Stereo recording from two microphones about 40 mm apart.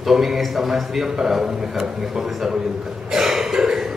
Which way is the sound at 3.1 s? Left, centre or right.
Centre.